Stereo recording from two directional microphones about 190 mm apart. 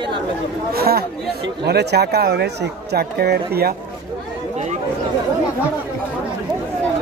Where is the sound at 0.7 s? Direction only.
55° right (ahead or behind).